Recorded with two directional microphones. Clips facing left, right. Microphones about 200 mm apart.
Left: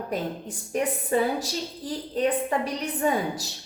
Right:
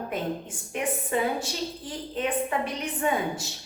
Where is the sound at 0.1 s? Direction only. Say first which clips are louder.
Left 2 dB; 35° left (ahead or behind).